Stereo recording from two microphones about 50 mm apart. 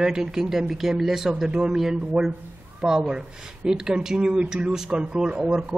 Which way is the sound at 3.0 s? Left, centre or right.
Centre.